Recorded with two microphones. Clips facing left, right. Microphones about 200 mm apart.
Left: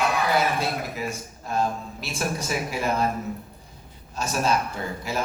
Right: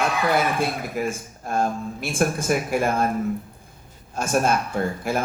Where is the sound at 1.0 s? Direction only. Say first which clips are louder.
Right 5 dB; 50° right (ahead or behind).